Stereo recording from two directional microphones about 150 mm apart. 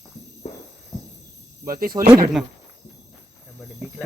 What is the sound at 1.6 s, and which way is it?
Speech, 75° right (ahead or behind).